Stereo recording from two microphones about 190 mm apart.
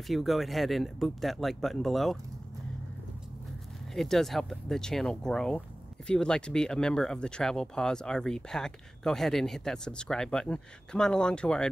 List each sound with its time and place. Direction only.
0.0 s speech: centre (ahead or behind)
3.9 s speech: centre (ahead or behind)